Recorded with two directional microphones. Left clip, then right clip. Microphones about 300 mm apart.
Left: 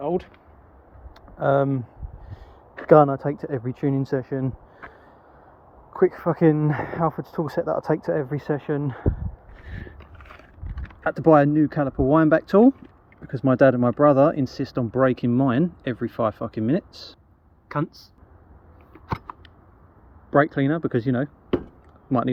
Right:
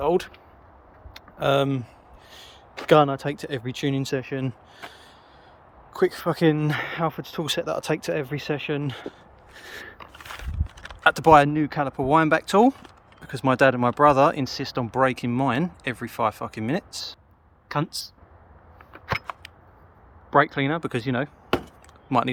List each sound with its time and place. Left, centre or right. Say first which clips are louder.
1.4 s speech: left 1 dB; centre
2.9 s speech: left 3 dB; centre
4.8 s gasp: right 1 dB; centre
5.9 s speech: left 2 dB; centre
10.6 s speech: right 7 dB; centre
19.1 s a sound: right 4 dB; centre
20.3 s speech: even; centre